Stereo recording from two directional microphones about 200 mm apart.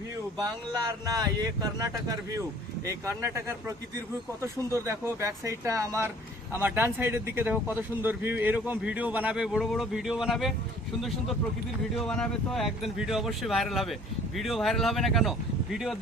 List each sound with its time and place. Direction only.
0.3 s speech: 20° right (ahead or behind)
2.8 s speech: 15° right (ahead or behind)
11.9 s speech: 5° left (ahead or behind)